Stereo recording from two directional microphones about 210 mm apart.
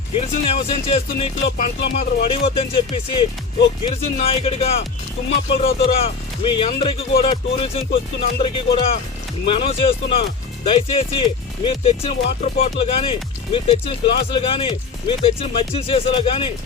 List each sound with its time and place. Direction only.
0.2 s speech: 30° left (ahead or behind)